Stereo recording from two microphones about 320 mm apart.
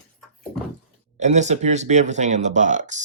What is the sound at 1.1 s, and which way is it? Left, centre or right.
Speech, right.